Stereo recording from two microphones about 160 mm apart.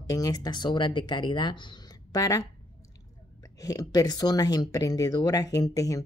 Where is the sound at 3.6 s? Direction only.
25° left (ahead or behind).